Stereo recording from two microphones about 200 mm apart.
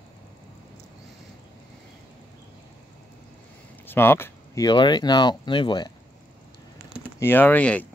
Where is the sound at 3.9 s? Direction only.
10° left (ahead or behind).